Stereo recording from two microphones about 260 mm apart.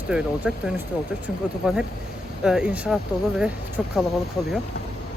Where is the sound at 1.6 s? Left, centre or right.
Centre.